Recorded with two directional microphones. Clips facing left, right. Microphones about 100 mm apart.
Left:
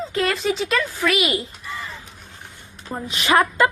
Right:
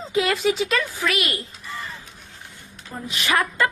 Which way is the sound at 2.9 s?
30° left (ahead or behind).